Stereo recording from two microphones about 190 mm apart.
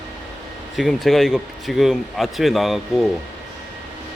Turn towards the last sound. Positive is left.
turn(degrees=0)  # may be behind; listen again after turning